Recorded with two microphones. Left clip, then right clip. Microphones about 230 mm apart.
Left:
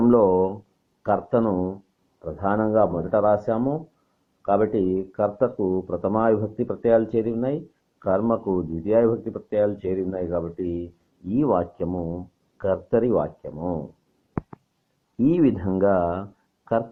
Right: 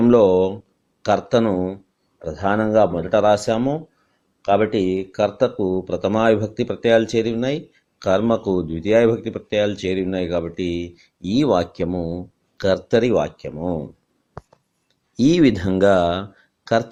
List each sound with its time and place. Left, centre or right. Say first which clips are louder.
0.0 s a sound: right 4 dB; right
1.0 s speech: right 4 dB; right
15.2 s speech: right 4 dB; right